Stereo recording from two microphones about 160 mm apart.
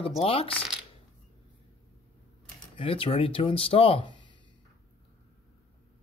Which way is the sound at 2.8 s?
35° left (ahead or behind).